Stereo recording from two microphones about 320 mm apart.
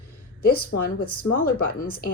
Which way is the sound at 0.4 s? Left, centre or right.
Left.